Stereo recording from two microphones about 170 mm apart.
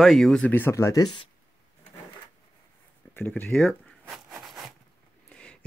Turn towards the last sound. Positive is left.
turn(degrees=5)  # may be behind; listen again after turning